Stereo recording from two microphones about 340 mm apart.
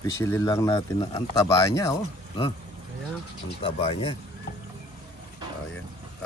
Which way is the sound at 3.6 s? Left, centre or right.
Centre.